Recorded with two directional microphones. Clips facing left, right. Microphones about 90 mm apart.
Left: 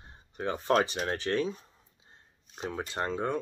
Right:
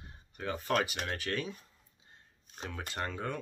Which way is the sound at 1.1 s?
25° left (ahead or behind).